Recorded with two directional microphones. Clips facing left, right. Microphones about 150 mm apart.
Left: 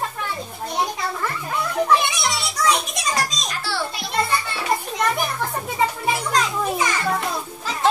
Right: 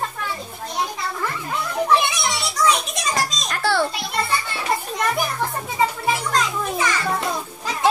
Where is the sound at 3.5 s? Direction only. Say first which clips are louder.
Right 6 dB; 55° right (ahead or behind).